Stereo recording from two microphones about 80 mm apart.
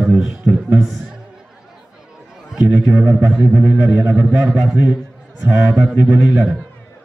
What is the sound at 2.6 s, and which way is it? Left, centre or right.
A man's voice, centre.